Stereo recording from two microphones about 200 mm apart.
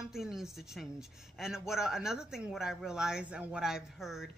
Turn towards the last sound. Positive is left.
turn(degrees=0)  # may be behind; listen again after turning